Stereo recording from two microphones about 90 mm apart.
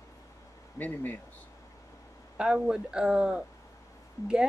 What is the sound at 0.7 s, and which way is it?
Speech, 20° left (ahead or behind).